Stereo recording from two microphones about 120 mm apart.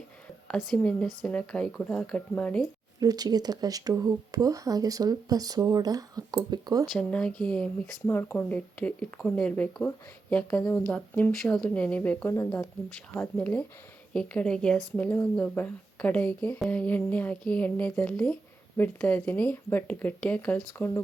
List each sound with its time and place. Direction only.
0.4 s speech: 5° left (ahead or behind)
3.0 s speech: 30° right (ahead or behind)
7.1 s speech: 10° left (ahead or behind)
11.3 s speech: 5° left (ahead or behind); by 12.6 s 25° left (ahead or behind)
13.3 s speech: 10° left (ahead or behind)